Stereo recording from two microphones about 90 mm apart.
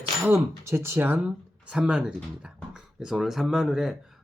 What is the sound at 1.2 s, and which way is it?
Speech, 10° right (ahead or behind).